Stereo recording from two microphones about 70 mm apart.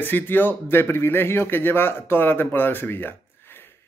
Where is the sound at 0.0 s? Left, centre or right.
Left.